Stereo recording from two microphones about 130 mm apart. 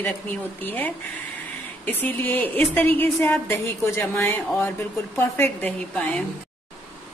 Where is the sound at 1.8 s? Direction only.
15° left (ahead or behind).